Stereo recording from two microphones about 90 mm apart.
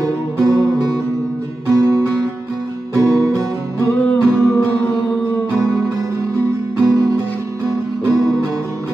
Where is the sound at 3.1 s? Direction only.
35° right (ahead or behind).